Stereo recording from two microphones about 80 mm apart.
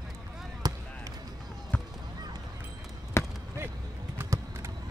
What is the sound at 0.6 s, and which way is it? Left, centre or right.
Basketball bounce, right.